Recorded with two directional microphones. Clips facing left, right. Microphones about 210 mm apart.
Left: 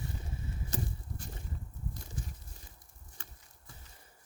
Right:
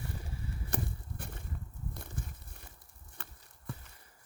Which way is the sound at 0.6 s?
60° right (ahead or behind).